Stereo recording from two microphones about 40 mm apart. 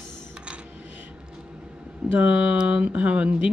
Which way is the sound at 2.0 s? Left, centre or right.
Right.